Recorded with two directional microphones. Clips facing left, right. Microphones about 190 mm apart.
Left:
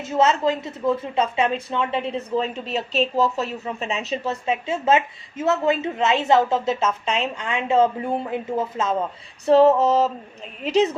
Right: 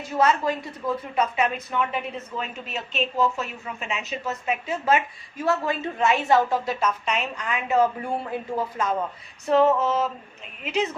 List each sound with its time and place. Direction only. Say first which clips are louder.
0.0 s a woman's voice: left 3 dB; 25° left (ahead or behind)
9.5 s female singing: left 5 dB; 35° left (ahead or behind)